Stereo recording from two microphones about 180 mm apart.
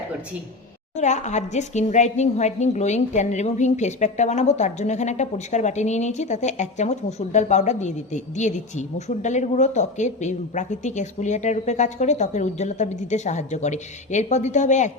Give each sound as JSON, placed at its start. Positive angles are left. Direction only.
{"t": 0.9, "sound": "a woman's voice", "side_deg": 40}